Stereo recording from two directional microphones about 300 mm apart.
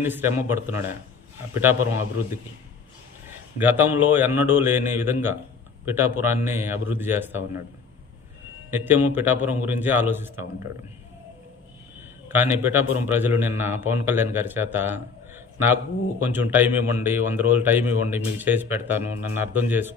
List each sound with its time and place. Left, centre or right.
0.0 s a man's voice: centre
3.5 s a man's voice: centre
8.6 s a man's voice: centre
12.3 s a man's voice: centre